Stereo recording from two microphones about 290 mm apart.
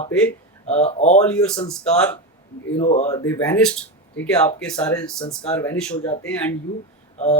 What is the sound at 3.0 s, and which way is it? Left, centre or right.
Speech, centre.